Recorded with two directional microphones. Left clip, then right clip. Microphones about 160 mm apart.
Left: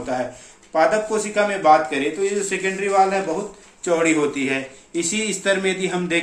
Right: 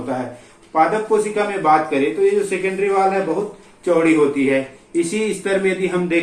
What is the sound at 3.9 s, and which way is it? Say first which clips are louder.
A man's voice: right 4 dB; 90° left.